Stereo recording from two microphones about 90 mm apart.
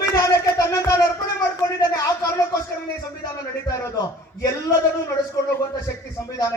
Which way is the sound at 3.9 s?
45° left (ahead or behind).